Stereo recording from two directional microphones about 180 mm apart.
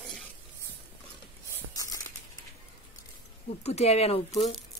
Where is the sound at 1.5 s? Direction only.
20° left (ahead or behind).